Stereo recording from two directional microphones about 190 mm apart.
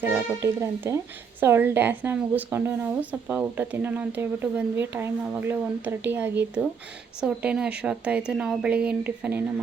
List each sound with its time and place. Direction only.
0.0 s a woman's voice: 15° right (ahead or behind)